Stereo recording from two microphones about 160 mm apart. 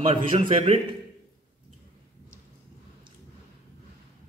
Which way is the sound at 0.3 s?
35° right (ahead or behind).